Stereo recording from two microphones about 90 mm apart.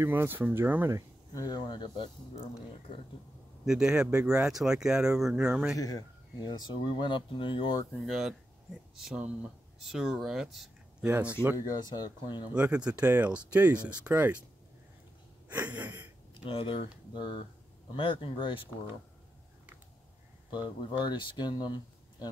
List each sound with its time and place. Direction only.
0.0 s speech: 25° right (ahead or behind)
1.3 s speech: 45° left (ahead or behind); by 2.5 s 65° left (ahead or behind)
3.6 s speech: 10° right (ahead or behind)
5.8 s speech: 45° left (ahead or behind); by 7.8 s 65° left (ahead or behind)
8.1 s speech: 5° right (ahead or behind)
9.2 s speech: 15° right (ahead or behind)
9.8 s speech: 5° right (ahead or behind)
11.1 s speech: 20° right (ahead or behind)
11.5 s speech: 50° left (ahead or behind)
12.5 s speech: 15° right (ahead or behind)
15.4 s a sound: 15° right (ahead or behind)
16.4 s speech: 90° left
17.1 s speech: 65° left (ahead or behind)
21.1 s speech: 60° left (ahead or behind)